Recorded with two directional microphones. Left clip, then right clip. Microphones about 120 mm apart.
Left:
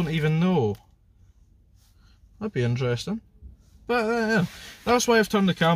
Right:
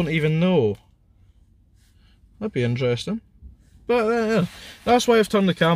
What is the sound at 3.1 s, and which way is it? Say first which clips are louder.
Speech: right 3 dB; 20° left (ahead or behind).